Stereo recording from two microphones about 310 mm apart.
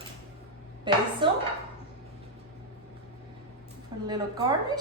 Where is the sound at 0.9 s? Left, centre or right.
Centre.